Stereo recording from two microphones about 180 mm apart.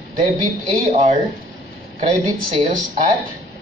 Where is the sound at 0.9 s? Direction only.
45° right (ahead or behind).